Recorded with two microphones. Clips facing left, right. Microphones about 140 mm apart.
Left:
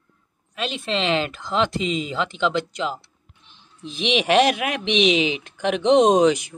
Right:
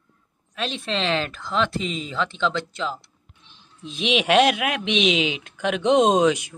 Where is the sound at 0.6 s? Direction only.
Centre (ahead or behind).